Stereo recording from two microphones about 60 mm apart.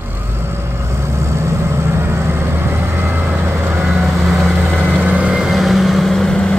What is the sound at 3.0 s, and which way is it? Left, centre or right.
Vehicle, right.